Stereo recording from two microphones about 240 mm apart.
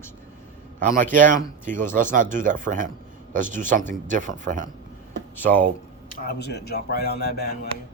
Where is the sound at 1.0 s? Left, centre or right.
Right.